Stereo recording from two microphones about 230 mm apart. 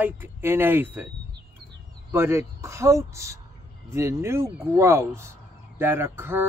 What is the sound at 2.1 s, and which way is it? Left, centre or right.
Speech, centre.